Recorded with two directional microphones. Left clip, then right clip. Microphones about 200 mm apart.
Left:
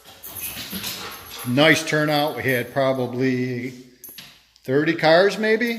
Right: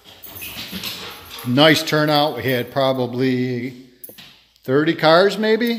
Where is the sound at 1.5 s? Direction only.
25° right (ahead or behind).